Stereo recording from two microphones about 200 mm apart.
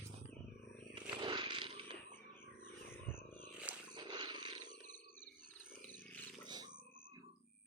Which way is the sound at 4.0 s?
25° right (ahead or behind).